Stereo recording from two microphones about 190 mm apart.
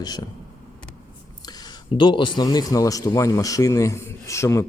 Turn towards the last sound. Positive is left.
turn(degrees=15)  # may be behind; listen again after turning